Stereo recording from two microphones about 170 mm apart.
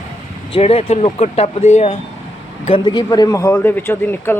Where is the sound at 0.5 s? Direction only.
35° left (ahead or behind).